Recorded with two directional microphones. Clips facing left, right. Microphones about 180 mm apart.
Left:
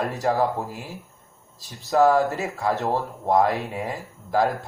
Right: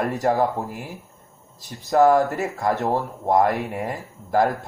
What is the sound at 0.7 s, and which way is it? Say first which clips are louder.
Speech: right 2 dB; 15° right (ahead or behind).